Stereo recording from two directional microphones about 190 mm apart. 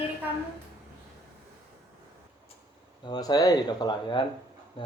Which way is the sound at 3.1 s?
20° left (ahead or behind).